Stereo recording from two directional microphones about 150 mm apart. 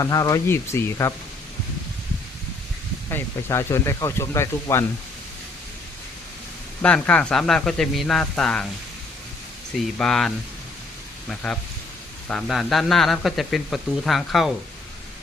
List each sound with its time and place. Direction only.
0.0 s speech: 20° left (ahead or behind)
3.1 s speech: 15° left (ahead or behind)
6.8 s speech: 10° left (ahead or behind)
9.7 s speech: centre (ahead or behind)
11.4 s speech: 5° left (ahead or behind)